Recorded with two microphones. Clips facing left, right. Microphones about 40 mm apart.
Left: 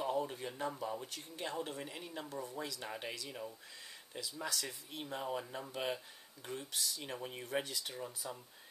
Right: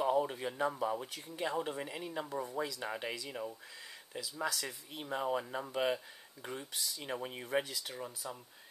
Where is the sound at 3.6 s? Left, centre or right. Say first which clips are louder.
Right 3 dB; centre.